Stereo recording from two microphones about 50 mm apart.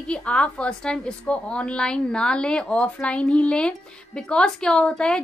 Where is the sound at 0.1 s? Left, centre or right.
Left.